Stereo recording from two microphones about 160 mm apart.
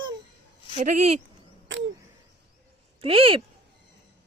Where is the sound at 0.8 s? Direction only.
45° right (ahead or behind).